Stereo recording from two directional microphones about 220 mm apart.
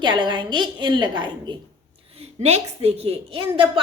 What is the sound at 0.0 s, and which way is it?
A woman's voice, 20° right (ahead or behind).